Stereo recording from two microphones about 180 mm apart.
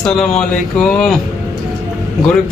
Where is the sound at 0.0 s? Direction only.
5° left (ahead or behind).